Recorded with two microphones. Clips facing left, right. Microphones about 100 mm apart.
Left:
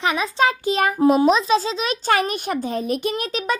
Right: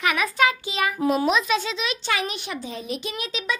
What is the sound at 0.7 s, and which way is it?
Speech, 45° left (ahead or behind).